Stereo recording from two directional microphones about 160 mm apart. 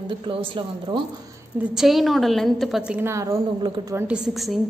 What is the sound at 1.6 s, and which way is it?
A woman's voice, centre (ahead or behind).